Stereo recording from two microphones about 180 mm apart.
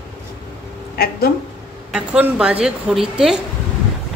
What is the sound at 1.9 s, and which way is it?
A woman's voice, 5° right (ahead or behind).